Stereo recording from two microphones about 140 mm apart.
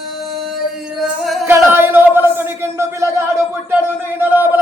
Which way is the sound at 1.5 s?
15° right (ahead or behind).